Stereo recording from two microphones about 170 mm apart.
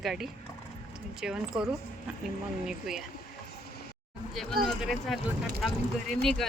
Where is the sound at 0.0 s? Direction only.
Centre (ahead or behind).